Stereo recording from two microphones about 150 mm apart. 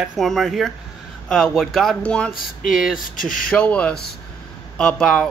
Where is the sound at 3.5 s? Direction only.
10° left (ahead or behind).